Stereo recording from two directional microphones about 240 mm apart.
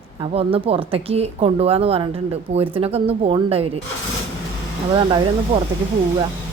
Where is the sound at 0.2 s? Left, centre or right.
Right.